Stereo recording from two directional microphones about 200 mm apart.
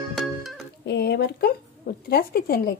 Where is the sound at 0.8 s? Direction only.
55° left (ahead or behind).